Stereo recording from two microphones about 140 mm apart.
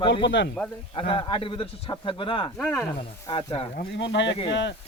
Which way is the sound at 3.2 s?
40° left (ahead or behind).